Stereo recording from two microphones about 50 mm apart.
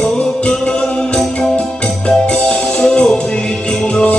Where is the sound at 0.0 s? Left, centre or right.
Centre.